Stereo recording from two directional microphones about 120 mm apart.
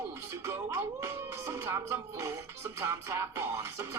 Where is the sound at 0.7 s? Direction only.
25° right (ahead or behind).